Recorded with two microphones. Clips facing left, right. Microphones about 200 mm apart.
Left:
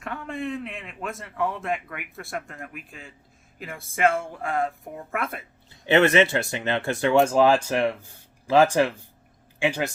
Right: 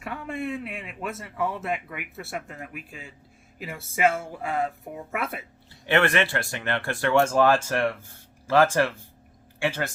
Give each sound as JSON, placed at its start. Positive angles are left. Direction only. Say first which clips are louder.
{"t": 0.0, "sound": "a man's voice", "louder": "even", "side_deg": -5}
{"t": 5.9, "sound": "speech", "louder": "left 4 dB", "side_deg": 20}